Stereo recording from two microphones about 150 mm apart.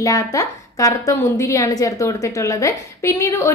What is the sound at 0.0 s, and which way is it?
A woman's voice, 20° left (ahead or behind).